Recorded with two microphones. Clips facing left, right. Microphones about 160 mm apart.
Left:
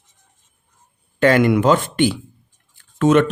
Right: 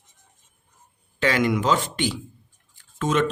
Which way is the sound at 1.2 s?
55° left (ahead or behind).